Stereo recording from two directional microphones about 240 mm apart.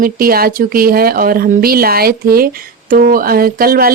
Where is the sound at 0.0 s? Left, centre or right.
Right.